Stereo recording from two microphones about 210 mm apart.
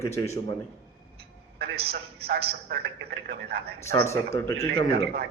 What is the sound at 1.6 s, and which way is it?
A man's voice, 50° right (ahead or behind).